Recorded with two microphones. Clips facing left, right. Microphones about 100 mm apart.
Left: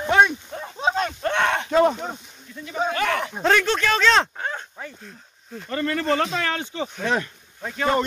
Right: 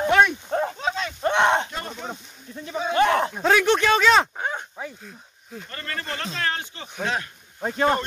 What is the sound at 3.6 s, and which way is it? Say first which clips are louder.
Speech: right 2 dB; 15° right (ahead or behind).